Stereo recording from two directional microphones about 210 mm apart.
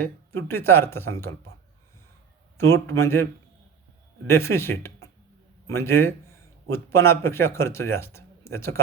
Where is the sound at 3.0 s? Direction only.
10° left (ahead or behind).